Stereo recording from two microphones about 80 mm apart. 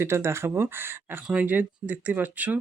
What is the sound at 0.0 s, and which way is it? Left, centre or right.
Speech, right.